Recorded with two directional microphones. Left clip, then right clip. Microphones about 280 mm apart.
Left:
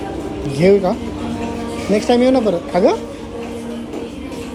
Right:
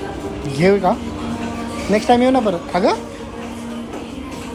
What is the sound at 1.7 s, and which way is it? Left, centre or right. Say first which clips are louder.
Speech: right 1 dB; centre.